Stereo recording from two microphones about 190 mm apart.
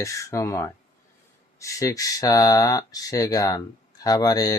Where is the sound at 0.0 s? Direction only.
15° left (ahead or behind).